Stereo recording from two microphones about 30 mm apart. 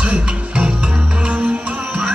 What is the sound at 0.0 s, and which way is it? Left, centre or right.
Music, right.